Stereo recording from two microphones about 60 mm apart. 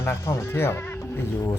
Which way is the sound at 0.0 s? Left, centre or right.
Left.